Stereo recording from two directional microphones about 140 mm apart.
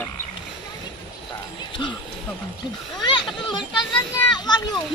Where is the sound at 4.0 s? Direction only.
30° left (ahead or behind).